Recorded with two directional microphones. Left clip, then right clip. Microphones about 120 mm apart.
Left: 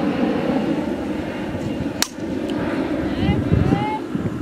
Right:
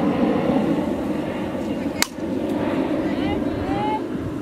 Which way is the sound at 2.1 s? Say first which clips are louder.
Even; 30° left (ahead or behind).